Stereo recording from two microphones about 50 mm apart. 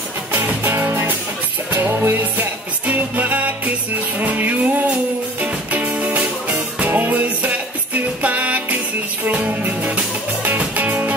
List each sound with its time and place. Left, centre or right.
0.3 s music: right